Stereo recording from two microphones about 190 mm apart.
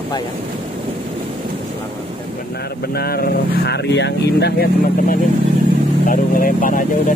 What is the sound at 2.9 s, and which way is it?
Speech, 55° left (ahead or behind).